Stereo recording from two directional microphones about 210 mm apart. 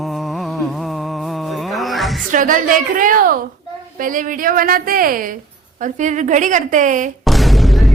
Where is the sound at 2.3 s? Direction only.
40° right (ahead or behind).